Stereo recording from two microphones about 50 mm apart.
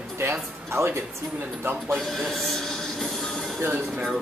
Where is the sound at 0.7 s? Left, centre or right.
Right.